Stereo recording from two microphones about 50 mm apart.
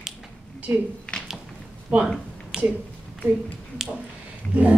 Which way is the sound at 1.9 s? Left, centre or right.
Right.